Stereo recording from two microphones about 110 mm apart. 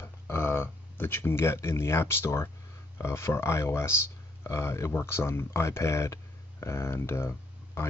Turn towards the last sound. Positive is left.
turn(degrees=20)  # may be behind; listen again after turning